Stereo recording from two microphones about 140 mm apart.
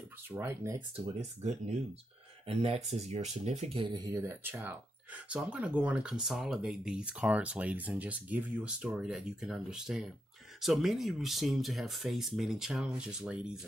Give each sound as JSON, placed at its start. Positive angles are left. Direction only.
{"t": 0.3, "sound": "speech", "side_deg": -20}
{"t": 2.4, "sound": "speech", "side_deg": -45}
{"t": 3.9, "sound": "speech", "side_deg": -25}
{"t": 4.2, "sound": "speech", "side_deg": -15}